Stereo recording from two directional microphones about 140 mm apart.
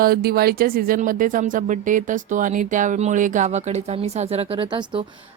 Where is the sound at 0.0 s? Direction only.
90° right.